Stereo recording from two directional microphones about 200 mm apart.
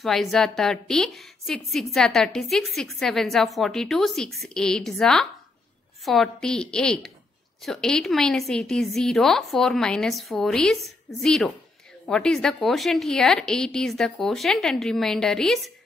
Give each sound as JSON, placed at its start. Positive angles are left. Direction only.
{"t": 0.0, "sound": "a woman's voice", "side_deg": 0}